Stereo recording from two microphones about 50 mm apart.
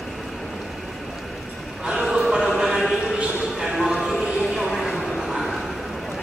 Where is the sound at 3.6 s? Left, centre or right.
Centre.